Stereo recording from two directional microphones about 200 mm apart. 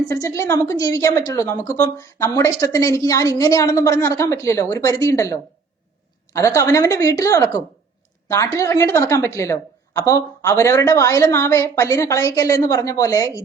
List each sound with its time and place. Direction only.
0.1 s a woman's voice: 15° left (ahead or behind)